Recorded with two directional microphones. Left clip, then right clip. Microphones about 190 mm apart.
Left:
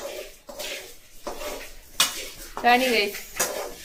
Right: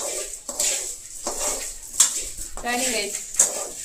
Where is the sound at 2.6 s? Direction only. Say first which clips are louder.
Left 6 dB; 5° left (ahead or behind).